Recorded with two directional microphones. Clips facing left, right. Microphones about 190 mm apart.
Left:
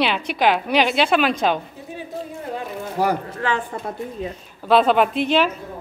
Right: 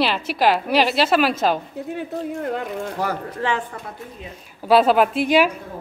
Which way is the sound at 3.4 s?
30° right (ahead or behind).